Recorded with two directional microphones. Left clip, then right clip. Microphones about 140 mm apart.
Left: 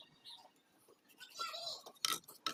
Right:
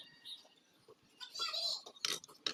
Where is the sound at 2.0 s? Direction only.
35° left (ahead or behind).